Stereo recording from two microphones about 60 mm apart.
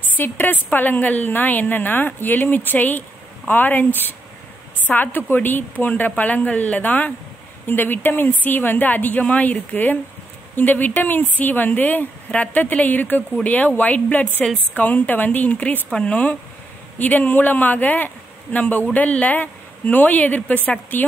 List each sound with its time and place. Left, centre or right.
0.2 s a woman's voice: left